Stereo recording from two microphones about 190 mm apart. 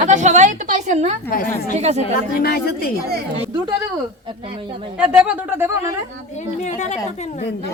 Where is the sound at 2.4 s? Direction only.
55° left (ahead or behind).